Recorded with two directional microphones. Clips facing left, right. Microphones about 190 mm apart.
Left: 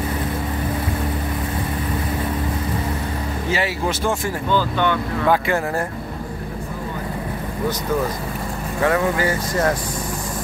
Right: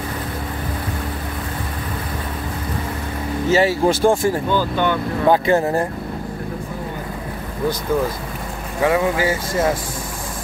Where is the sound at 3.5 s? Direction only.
30° right (ahead or behind).